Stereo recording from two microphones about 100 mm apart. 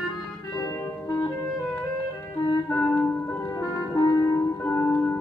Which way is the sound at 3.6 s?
35° left (ahead or behind).